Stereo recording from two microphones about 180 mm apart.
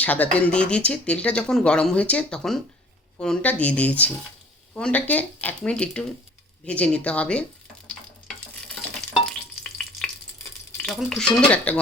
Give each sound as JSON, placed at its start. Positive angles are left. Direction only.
{"t": 0.0, "sound": "speech", "side_deg": 10}
{"t": 8.6, "sound": "stir", "side_deg": 5}
{"t": 9.6, "sound": "frying", "side_deg": 5}
{"t": 10.8, "sound": "speech", "side_deg": 0}